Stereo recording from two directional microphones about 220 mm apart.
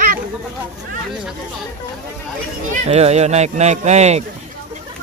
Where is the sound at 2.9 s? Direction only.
30° right (ahead or behind).